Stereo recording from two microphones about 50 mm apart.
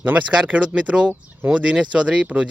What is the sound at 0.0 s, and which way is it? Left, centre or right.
Speech, right.